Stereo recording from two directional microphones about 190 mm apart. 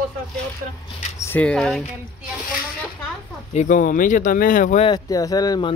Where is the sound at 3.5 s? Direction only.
40° left (ahead or behind).